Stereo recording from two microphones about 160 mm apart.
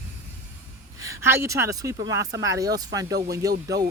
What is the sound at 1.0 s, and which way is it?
Speech, 20° right (ahead or behind).